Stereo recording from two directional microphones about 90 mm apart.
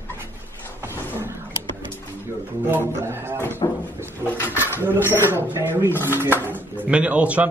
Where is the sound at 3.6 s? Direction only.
60° left (ahead or behind).